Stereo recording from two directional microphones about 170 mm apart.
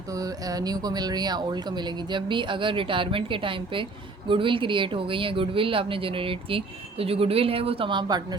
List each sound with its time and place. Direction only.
0.1 s speech: 20° right (ahead or behind)